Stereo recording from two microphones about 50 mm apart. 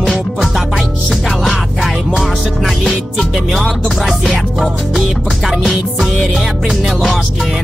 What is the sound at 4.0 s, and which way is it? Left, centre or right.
Music, centre.